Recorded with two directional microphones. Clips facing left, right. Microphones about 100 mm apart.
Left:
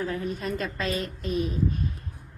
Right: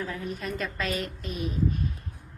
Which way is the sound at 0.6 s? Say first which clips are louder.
Left 1 dB; 30° left (ahead or behind).